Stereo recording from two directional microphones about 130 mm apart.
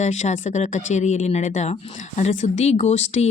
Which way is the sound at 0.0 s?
65° left (ahead or behind).